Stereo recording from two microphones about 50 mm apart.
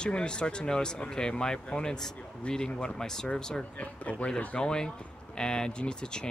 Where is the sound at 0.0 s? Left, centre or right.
Centre.